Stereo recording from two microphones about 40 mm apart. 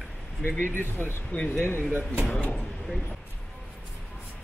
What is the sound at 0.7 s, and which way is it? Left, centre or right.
Speech, left.